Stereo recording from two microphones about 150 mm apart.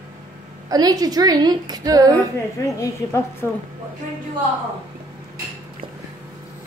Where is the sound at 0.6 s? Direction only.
25° right (ahead or behind).